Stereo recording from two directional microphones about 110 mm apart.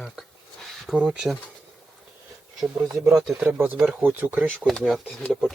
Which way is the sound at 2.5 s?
5° right (ahead or behind).